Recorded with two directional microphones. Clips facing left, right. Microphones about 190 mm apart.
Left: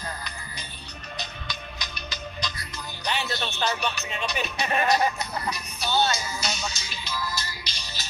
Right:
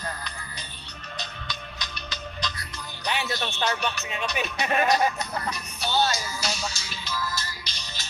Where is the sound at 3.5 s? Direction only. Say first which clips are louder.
Left 1 dB; 5° right (ahead or behind).